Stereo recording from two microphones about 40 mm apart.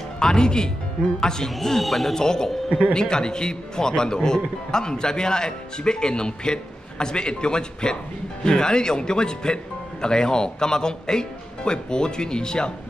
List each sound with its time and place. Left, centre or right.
0.2 s a man's voice: centre
2.1 s a man's voice: centre